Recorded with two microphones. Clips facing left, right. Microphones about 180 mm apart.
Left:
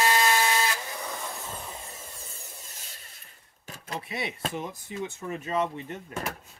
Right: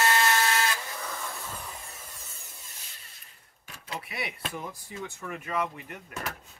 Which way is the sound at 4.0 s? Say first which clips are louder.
Left 5 dB; 25° left (ahead or behind).